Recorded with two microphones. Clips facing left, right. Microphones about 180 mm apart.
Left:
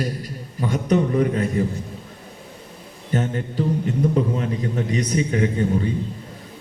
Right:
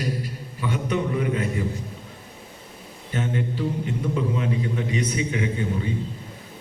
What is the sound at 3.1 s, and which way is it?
A man's voice, 40° left (ahead or behind).